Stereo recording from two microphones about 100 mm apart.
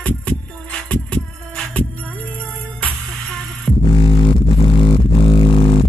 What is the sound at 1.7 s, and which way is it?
Music, 15° left (ahead or behind).